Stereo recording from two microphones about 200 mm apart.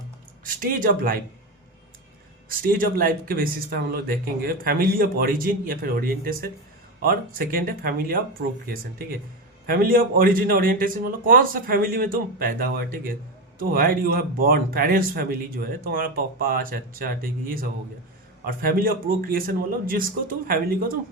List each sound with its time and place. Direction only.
0.4 s speech: 45° right (ahead or behind)
2.5 s speech: 45° right (ahead or behind)